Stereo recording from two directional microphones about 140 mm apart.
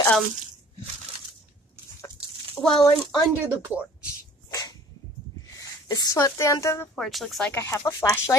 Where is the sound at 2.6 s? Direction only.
15° left (ahead or behind).